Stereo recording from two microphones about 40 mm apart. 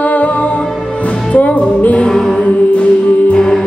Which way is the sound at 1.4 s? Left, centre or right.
Left.